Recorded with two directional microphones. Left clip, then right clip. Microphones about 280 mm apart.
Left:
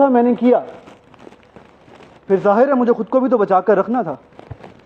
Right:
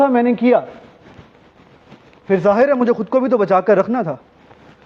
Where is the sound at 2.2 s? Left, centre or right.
Right.